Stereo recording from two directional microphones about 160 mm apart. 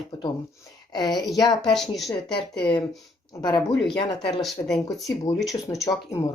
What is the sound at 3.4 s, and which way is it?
Speech, 25° left (ahead or behind).